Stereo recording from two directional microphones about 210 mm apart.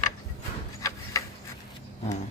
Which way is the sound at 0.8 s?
15° left (ahead or behind).